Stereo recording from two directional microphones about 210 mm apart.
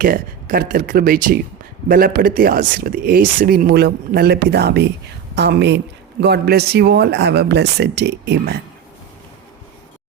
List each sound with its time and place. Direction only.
0.0 s speech: 45° right (ahead or behind)